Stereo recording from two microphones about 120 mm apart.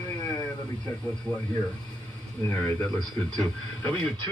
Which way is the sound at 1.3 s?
15° left (ahead or behind).